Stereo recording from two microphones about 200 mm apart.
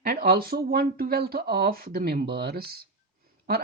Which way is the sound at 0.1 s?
50° right (ahead or behind).